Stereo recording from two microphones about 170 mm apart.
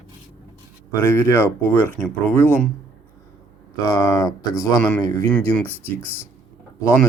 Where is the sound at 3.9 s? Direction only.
20° left (ahead or behind).